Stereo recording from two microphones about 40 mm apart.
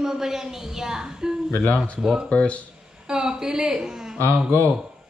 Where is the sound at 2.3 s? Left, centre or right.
Left.